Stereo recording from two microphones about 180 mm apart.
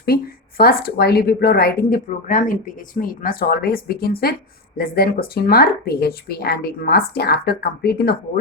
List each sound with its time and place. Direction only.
0.0 s speech: 55° left (ahead or behind)